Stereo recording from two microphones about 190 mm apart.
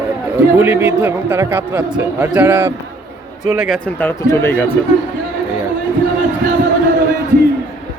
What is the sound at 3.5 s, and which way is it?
Speech, centre (ahead or behind).